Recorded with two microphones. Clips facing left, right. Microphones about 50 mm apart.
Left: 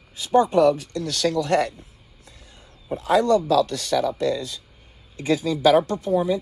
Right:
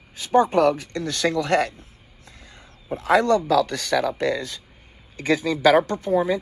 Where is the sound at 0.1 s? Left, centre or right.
Right.